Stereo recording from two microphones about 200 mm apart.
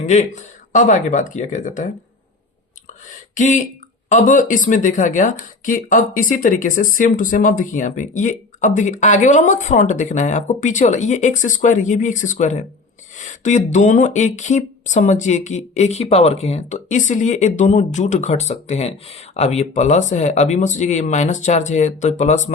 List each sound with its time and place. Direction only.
0.0 s speech: 35° left (ahead or behind)
3.3 s speech: 40° left (ahead or behind)